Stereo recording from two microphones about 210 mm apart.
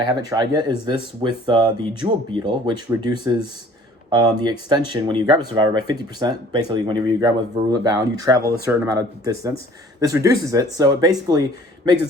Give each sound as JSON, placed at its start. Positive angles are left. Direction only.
{"t": 0.2, "sound": "speech", "side_deg": -15}